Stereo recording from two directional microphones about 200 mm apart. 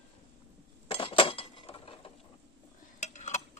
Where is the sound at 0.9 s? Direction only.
25° left (ahead or behind).